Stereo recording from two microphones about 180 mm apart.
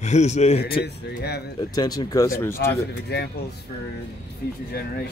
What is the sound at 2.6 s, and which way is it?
Speech, 65° left (ahead or behind).